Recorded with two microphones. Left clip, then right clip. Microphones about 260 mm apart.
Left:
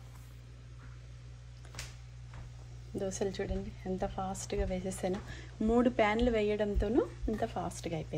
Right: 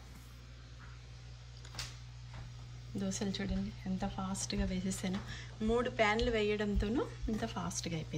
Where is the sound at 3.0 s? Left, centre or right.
Left.